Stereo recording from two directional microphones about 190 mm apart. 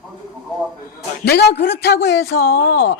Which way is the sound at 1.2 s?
60° left (ahead or behind).